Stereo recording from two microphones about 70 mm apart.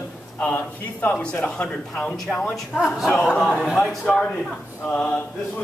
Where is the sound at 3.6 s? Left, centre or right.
Centre.